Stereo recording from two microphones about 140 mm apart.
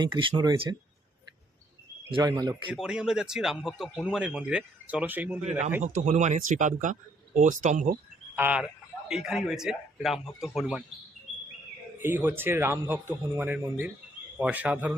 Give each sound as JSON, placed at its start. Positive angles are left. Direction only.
{"t": 0.0, "sound": "speech", "side_deg": -35}
{"t": 2.2, "sound": "speech", "side_deg": -25}
{"t": 2.7, "sound": "a man's voice", "side_deg": -5}
{"t": 5.4, "sound": "speech", "side_deg": -55}
{"t": 8.4, "sound": "a man's voice", "side_deg": -10}
{"t": 11.9, "sound": "a man's voice", "side_deg": -15}